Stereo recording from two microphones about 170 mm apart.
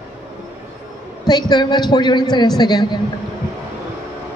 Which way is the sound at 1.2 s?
25° left (ahead or behind).